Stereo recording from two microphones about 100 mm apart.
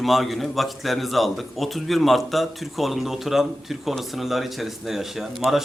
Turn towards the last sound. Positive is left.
turn(degrees=-5)  # may be behind; listen again after turning